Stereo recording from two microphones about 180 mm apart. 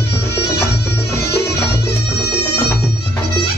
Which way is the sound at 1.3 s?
65° left (ahead or behind).